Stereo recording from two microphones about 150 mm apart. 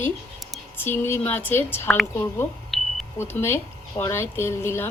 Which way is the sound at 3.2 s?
15° left (ahead or behind).